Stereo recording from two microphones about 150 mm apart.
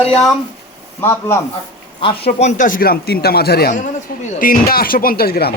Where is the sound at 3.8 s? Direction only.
55° left (ahead or behind); by 5.5 s 90° left.